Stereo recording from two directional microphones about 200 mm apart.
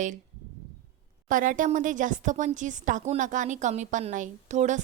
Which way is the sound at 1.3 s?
40° right (ahead or behind).